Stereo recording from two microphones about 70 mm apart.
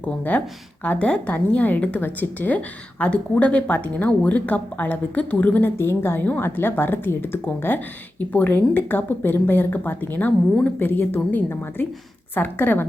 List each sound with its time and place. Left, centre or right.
0.0 s a woman's voice: left
5.7 s a woman's voice: left